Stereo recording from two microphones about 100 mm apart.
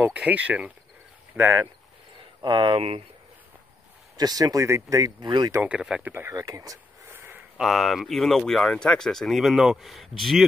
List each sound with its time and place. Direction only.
0.0 s speech: 15° right (ahead or behind)
2.4 s speech: 60° right (ahead or behind)
4.2 s speech: 40° right (ahead or behind)
5.6 s speech: 10° right (ahead or behind)
6.0 s speech: 20° right (ahead or behind)
6.3 s speech: 35° right (ahead or behind)
7.5 s speech: centre (ahead or behind)